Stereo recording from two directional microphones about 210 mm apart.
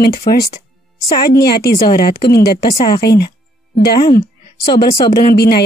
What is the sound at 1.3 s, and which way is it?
Speech, 50° left (ahead or behind).